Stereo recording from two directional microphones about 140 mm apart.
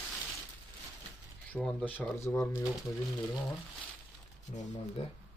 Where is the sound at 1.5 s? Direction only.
5° left (ahead or behind).